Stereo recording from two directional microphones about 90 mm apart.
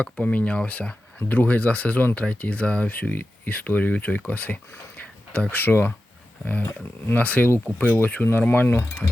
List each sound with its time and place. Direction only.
0.0 s speech: 15° left (ahead or behind)